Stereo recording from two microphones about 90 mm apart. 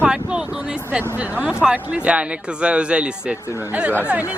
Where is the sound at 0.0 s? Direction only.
10° right (ahead or behind).